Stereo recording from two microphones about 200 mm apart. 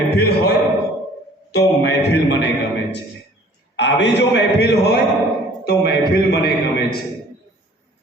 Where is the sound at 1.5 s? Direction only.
55° left (ahead or behind).